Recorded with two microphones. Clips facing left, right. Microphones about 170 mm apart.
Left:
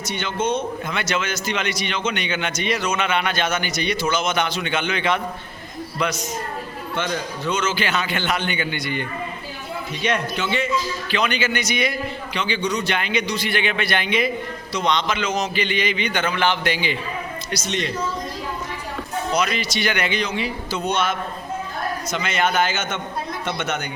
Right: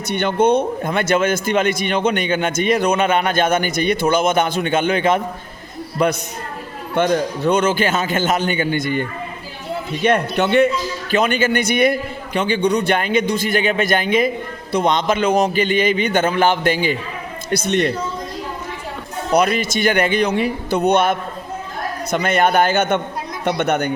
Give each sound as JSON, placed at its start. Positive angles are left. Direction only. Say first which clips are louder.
{"t": 0.1, "sound": "a man's voice", "louder": "right 8 dB", "side_deg": -60}
{"t": 0.8, "sound": "a man's voice", "louder": "right 8 dB", "side_deg": -50}
{"t": 11.1, "sound": "a man's voice", "louder": "right 6 dB", "side_deg": -50}
{"t": 17.5, "sound": "a man's voice", "louder": "right 9 dB", "side_deg": -55}
{"t": 19.3, "sound": "a man's voice", "louder": "right 8 dB", "side_deg": -55}